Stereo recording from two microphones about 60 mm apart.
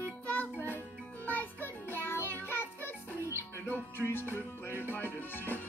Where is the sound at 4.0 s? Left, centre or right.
Left.